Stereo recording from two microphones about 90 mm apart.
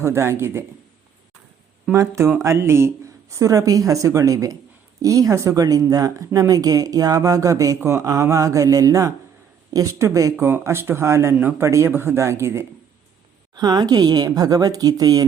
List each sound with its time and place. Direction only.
0.0 s speech: 30° right (ahead or behind)
2.0 s speech: 30° right (ahead or behind)
13.6 s speech: 45° right (ahead or behind)